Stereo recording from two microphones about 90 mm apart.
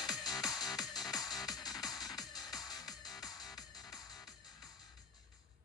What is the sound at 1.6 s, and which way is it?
Music, 45° left (ahead or behind).